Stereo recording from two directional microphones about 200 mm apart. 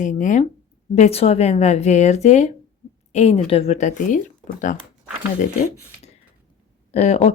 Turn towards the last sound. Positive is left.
turn(degrees=35)  # may be behind; listen again after turning